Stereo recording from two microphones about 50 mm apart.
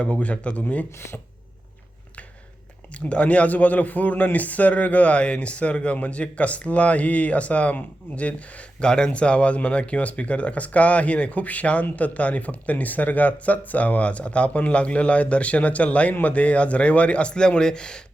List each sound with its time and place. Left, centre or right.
0.0 s speech: left
2.9 s speech: left